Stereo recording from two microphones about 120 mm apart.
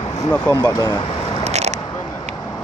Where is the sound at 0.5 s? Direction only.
30° left (ahead or behind).